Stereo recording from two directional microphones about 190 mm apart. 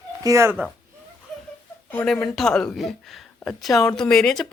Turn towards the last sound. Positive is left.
turn(degrees=0)  # may be behind; listen again after turning